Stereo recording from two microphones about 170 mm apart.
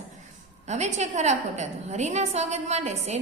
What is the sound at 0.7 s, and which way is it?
A woman's voice, 45° right (ahead or behind).